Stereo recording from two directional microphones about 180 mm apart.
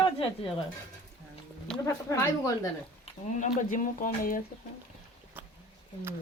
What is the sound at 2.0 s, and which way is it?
Speech, 15° left (ahead or behind).